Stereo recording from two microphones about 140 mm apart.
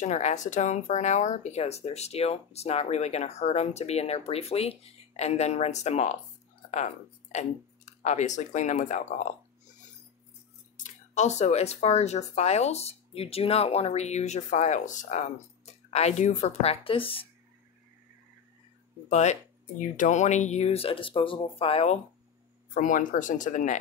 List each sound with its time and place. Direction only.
0.0 s speech: 55° left (ahead or behind)
7.3 s speech: 55° left (ahead or behind)
10.8 s speech: 55° left (ahead or behind)
19.0 s speech: 55° left (ahead or behind)
22.8 s speech: 70° left (ahead or behind)